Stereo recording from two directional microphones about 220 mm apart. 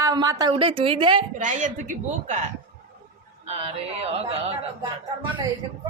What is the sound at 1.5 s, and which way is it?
Speech, 35° right (ahead or behind).